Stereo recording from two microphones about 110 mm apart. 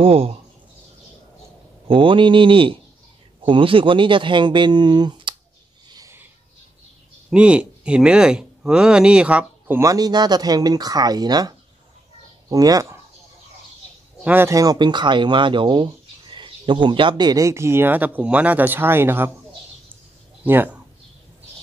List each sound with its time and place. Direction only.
0.0 s speech: 60° right (ahead or behind)
1.9 s speech: 50° right (ahead or behind)
5.9 s a sound: 35° right (ahead or behind)
7.2 s speech: 10° right (ahead or behind)
9.8 s speech: 30° right (ahead or behind)
14.2 s a man's voice: 15° right (ahead or behind)
14.5 s speech: 35° right (ahead or behind)
20.4 s speech: 15° right (ahead or behind)